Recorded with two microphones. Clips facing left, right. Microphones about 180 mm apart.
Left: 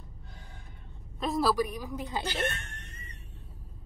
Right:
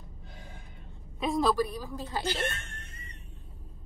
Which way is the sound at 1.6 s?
15° left (ahead or behind).